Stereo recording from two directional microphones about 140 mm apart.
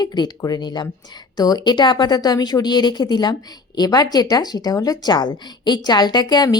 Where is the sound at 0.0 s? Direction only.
30° left (ahead or behind).